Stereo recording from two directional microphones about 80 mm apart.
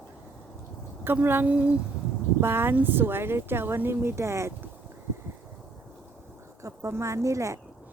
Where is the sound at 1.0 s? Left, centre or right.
Right.